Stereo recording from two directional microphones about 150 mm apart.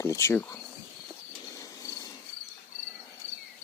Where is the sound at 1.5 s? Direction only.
25° left (ahead or behind).